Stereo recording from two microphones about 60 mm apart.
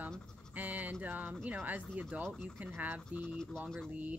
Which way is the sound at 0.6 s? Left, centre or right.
Right.